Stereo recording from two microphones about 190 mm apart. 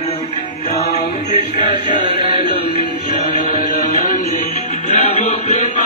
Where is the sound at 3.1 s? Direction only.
50° left (ahead or behind).